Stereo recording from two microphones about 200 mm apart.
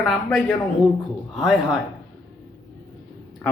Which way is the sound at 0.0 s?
Centre (ahead or behind).